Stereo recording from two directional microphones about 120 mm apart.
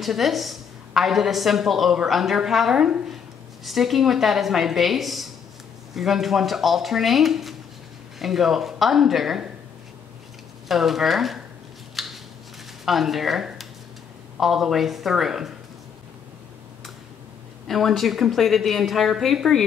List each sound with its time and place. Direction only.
0.0 s a woman's voice: centre (ahead or behind)
10.7 s a woman's voice: centre (ahead or behind)
11.9 s scissors: centre (ahead or behind)
12.8 s a woman's voice: centre (ahead or behind)
17.6 s a woman's voice: centre (ahead or behind)